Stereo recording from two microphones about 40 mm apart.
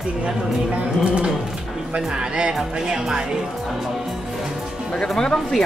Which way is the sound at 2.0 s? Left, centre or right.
Right.